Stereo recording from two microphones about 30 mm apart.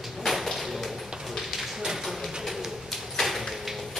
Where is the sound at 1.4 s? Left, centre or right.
Centre.